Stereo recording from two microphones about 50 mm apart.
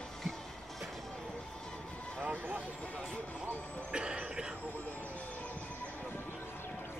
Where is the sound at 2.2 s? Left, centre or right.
Right.